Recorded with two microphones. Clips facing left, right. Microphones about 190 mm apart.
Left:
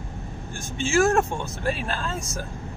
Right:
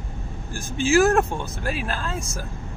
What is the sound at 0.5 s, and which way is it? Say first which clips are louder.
Speech: right 4 dB; centre (ahead or behind).